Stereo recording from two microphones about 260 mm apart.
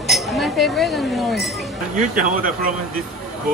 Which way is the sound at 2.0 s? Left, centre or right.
Right.